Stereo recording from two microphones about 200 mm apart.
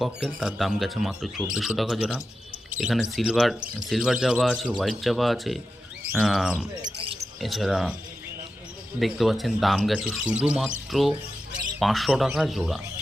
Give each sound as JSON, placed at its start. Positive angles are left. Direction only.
{"t": 0.0, "sound": "speech", "side_deg": 0}
{"t": 6.8, "sound": "basketball bounce", "side_deg": -25}
{"t": 7.4, "sound": "speech", "side_deg": 0}
{"t": 9.0, "sound": "speech", "side_deg": 0}